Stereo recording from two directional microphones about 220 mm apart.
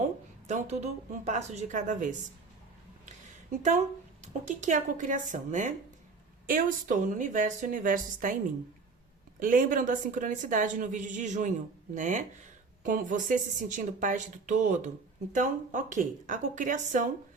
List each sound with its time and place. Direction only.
0.4 s a woman's voice: 30° right (ahead or behind)
3.1 s a sound: 35° right (ahead or behind)
4.2 s a woman's voice: 30° right (ahead or behind)
9.4 s a woman's voice: 40° right (ahead or behind)